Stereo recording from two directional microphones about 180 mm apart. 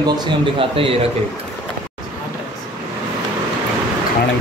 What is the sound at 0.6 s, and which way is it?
Speech, 30° right (ahead or behind).